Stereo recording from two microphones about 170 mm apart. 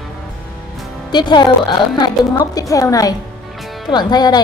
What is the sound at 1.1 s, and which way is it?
A woman's voice, 25° left (ahead or behind).